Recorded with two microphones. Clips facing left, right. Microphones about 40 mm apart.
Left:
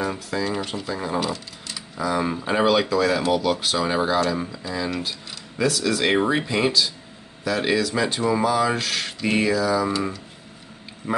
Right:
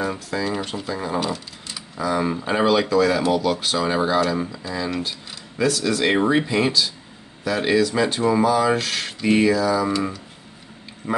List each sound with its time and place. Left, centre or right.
0.0 s speech: centre
11.0 s speech: centre